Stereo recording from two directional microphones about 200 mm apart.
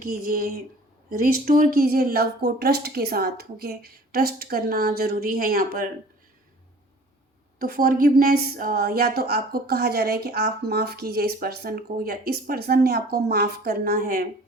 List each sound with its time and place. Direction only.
0.0 s a woman's voice: 45° right (ahead or behind)
7.6 s a woman's voice: 45° right (ahead or behind)